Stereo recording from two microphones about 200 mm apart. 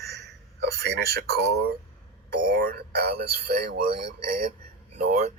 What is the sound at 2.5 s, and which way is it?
A man's voice, 45° right (ahead or behind).